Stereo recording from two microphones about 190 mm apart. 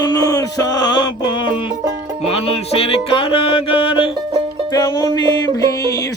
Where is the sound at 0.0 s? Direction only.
20° left (ahead or behind).